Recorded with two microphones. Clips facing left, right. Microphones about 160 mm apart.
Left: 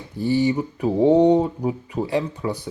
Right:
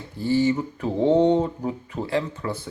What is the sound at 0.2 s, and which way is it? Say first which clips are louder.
Speech: left 1 dB; 15° left (ahead or behind).